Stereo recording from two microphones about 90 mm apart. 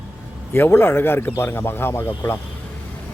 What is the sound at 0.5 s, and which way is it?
Speech, 25° left (ahead or behind).